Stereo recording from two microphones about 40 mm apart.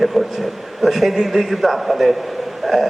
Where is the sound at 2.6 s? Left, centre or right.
Centre.